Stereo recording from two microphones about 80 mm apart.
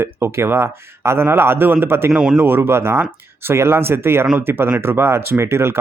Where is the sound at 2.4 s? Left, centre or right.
Right.